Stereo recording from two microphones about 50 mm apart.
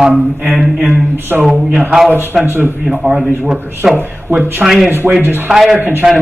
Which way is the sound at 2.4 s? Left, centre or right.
Right.